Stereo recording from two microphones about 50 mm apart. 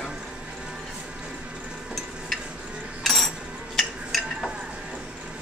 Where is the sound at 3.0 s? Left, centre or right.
Centre.